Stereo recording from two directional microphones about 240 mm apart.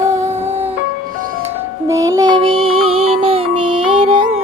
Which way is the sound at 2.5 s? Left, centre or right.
Right.